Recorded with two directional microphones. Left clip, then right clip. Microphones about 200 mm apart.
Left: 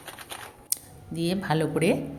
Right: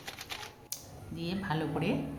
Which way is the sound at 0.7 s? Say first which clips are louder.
Left 7 dB; 30° left (ahead or behind).